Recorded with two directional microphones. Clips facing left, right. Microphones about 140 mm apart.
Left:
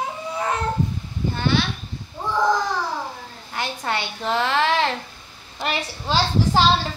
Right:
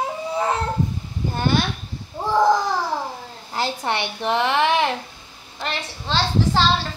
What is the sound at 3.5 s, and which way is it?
A woman's voice, 25° right (ahead or behind).